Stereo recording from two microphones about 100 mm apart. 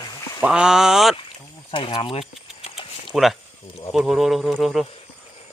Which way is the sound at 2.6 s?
65° left (ahead or behind).